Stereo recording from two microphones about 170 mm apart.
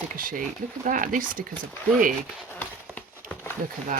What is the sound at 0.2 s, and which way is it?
Speech, 55° right (ahead or behind).